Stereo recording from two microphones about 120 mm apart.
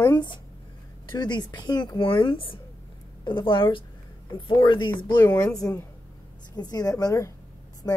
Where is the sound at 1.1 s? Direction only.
35° left (ahead or behind).